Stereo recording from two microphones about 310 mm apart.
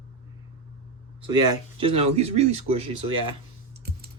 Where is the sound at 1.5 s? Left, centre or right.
Centre.